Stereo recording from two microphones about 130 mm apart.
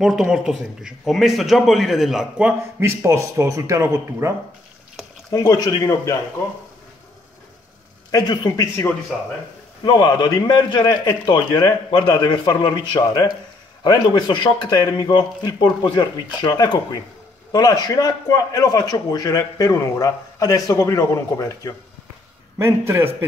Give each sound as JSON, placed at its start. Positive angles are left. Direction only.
{"t": 0.0, "sound": "a man's voice", "side_deg": -5}
{"t": 2.8, "sound": "speech", "side_deg": -20}
{"t": 5.0, "sound": "a sound", "side_deg": 0}
{"t": 5.3, "sound": "a man's voice", "side_deg": 30}
{"t": 8.1, "sound": "a man's voice", "side_deg": 30}
{"t": 9.8, "sound": "a man's voice", "side_deg": 35}
{"t": 22.6, "sound": "speech", "side_deg": -20}